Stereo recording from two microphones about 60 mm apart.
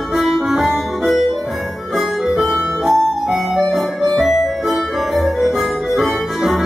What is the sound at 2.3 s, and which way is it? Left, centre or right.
Music, centre.